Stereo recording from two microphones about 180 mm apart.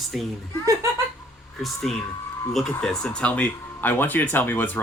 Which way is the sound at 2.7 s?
5° left (ahead or behind).